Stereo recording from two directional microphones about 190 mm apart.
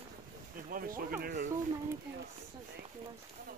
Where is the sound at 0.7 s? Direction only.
50° right (ahead or behind).